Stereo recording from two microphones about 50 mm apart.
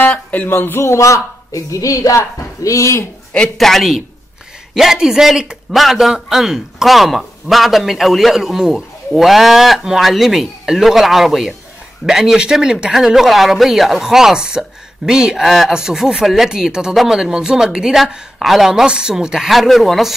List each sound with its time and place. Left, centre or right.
0.1 s speech: left
0.5 s a woman's voice: left
3.5 s a man's voice: centre
15.4 s a man's voice: centre